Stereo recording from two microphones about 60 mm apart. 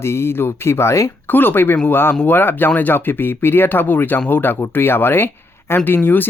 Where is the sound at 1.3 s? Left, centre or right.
Left.